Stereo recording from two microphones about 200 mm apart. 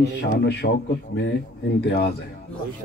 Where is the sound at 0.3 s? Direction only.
55° left (ahead or behind).